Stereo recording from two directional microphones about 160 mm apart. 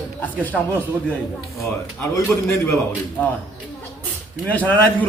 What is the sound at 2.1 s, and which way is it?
Speech, 15° left (ahead or behind).